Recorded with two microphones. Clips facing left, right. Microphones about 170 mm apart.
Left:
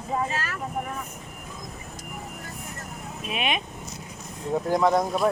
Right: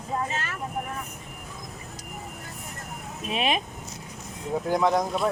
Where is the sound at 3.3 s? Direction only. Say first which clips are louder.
Right 2 dB; 35° right (ahead or behind).